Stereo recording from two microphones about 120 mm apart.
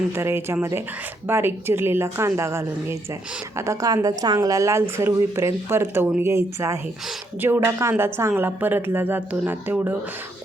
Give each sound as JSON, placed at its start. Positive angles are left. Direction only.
{"t": 0.1, "sound": "speech", "side_deg": -20}
{"t": 3.7, "sound": "a woman's voice", "side_deg": -30}